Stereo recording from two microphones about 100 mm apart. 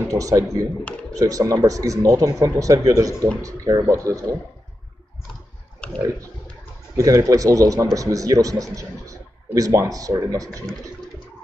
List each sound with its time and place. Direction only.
0.1 s speech: 35° right (ahead or behind)
5.8 s a sound: 10° left (ahead or behind)
7.0 s speech: 35° right (ahead or behind)